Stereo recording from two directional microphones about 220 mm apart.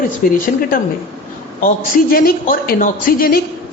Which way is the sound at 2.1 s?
40° left (ahead or behind).